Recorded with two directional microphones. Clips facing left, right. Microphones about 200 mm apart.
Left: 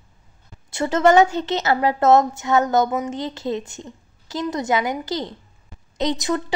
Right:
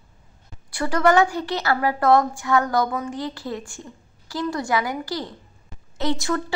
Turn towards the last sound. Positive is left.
turn(degrees=20)  # may be behind; listen again after turning